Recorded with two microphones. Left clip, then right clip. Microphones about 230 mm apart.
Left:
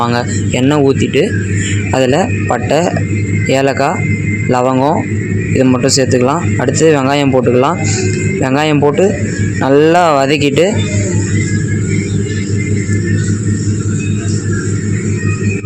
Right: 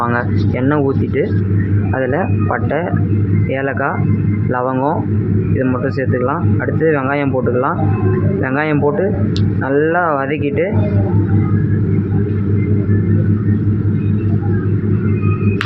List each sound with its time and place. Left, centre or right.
0.6 s speech: left